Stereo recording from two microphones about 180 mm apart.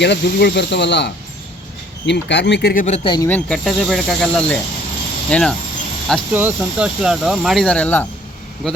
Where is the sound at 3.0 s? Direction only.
25° left (ahead or behind).